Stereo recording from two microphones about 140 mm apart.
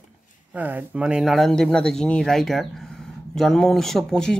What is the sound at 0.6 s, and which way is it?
Speech, 10° right (ahead or behind).